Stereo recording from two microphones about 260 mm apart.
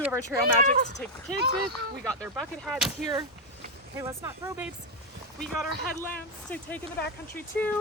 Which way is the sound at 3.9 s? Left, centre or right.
Centre.